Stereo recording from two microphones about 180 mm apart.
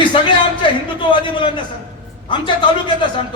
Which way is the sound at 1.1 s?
25° left (ahead or behind).